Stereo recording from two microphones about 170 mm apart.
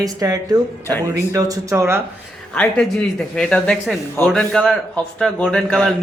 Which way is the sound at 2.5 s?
5° left (ahead or behind).